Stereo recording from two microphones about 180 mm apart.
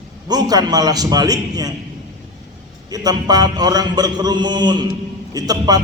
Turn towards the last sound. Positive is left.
turn(degrees=-20)  # may be behind; listen again after turning